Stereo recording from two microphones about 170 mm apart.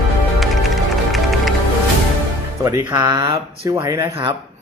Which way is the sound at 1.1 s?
Centre (ahead or behind).